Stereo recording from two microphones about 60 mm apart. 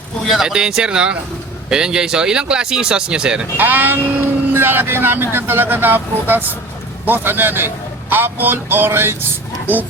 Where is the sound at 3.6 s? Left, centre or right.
Right.